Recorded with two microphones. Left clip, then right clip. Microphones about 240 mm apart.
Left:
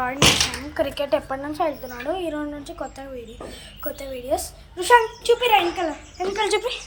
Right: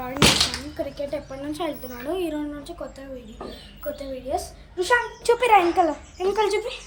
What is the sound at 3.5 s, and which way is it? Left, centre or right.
Speech, centre.